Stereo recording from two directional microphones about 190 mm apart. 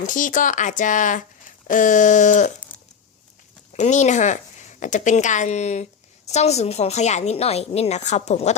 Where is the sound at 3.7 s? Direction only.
40° left (ahead or behind).